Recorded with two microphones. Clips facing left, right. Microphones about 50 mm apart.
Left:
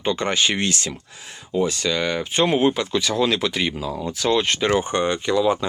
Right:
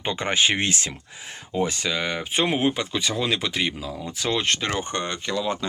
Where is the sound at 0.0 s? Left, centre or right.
Right.